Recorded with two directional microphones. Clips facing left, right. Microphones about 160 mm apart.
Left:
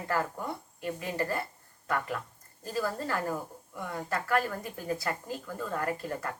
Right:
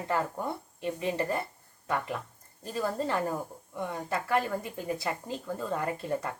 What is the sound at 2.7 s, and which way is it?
Speech, 20° right (ahead or behind).